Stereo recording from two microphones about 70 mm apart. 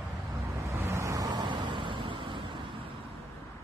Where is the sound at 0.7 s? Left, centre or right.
Right.